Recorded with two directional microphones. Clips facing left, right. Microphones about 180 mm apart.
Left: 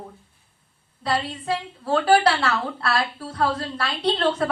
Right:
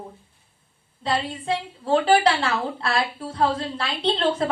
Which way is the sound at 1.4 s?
25° right (ahead or behind).